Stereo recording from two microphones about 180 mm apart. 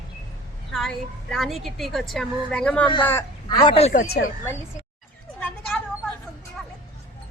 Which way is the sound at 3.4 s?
25° left (ahead or behind).